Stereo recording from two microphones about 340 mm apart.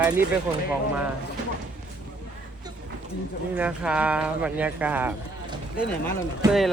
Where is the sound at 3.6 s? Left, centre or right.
Centre.